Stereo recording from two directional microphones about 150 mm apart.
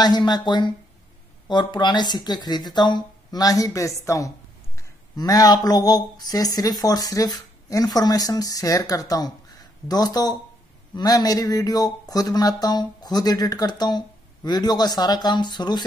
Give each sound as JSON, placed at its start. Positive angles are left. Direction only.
{"t": 0.0, "sound": "speech", "side_deg": 30}